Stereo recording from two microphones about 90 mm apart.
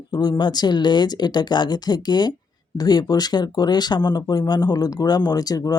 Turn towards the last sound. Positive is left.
turn(degrees=45)  # may be behind; listen again after turning